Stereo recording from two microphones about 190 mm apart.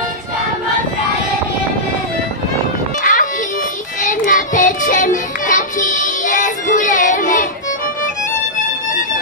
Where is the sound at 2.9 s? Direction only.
45° left (ahead or behind).